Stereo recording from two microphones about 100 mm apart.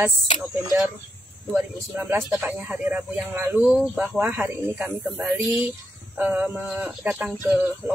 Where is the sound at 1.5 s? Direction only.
20° right (ahead or behind).